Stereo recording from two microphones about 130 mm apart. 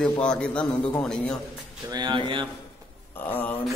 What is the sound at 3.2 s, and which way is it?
Speech, 15° left (ahead or behind).